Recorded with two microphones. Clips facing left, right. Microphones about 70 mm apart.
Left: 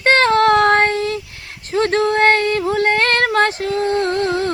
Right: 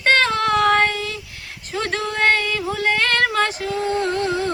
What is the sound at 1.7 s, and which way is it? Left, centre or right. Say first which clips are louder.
Female singing: left 8 dB; left.